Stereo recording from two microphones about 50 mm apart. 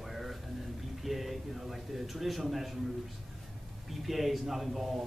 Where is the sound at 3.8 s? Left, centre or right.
Centre.